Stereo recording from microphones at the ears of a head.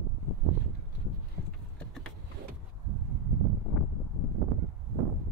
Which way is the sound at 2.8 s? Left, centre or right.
Right.